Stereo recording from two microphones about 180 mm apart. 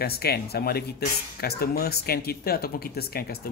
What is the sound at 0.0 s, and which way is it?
Speech, 60° left (ahead or behind).